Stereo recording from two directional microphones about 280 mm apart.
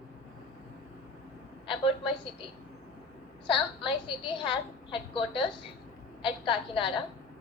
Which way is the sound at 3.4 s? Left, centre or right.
Centre.